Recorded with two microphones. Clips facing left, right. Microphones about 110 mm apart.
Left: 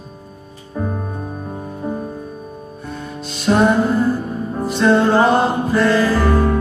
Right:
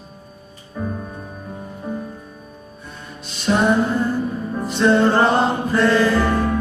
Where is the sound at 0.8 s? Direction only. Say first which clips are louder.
Left 4 dB; 45° left (ahead or behind).